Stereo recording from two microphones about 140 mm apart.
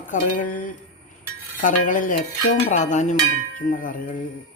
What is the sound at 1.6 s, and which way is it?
Cutlery, 70° left (ahead or behind).